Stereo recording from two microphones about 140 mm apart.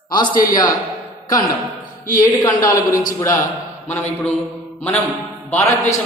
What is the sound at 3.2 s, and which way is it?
A man's voice, 25° left (ahead or behind).